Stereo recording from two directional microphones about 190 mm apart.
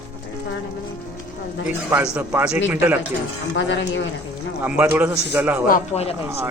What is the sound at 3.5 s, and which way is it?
Speech, 75° left (ahead or behind).